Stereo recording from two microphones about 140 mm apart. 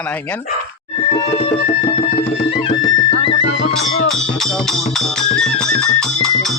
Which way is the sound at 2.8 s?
30° left (ahead or behind).